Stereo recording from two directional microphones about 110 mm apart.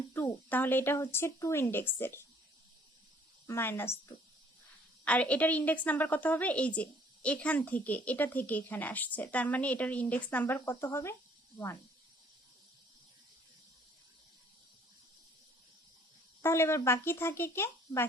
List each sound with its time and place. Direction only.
0.5 s speech: 20° left (ahead or behind)
3.4 s speech: 20° left (ahead or behind)
5.0 s a woman's voice: 10° left (ahead or behind)
16.4 s speech: 25° left (ahead or behind)